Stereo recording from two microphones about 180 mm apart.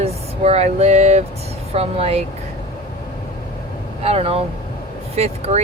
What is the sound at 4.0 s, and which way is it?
Speech, 35° right (ahead or behind).